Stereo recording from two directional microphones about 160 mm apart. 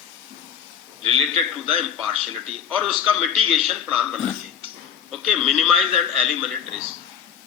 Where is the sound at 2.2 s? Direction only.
Centre (ahead or behind).